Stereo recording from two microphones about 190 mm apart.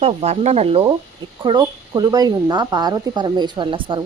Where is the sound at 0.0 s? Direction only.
35° right (ahead or behind).